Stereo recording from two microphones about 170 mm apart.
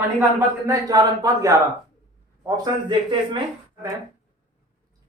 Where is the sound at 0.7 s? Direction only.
20° right (ahead or behind).